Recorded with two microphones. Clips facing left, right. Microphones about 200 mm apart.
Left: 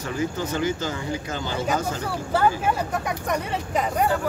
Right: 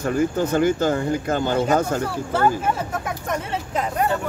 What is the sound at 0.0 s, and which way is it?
Speech, 55° right (ahead or behind).